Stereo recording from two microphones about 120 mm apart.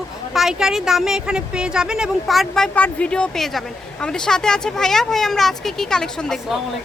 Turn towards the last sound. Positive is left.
turn(degrees=0)  # may be behind; listen again after turning